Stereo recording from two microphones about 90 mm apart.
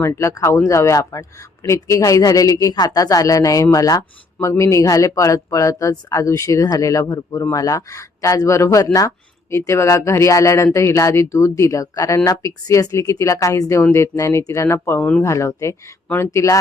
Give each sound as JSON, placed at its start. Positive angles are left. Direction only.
{"t": 0.0, "sound": "speech", "side_deg": 35}